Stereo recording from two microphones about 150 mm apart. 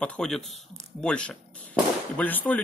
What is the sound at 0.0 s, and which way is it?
Speech, 5° left (ahead or behind).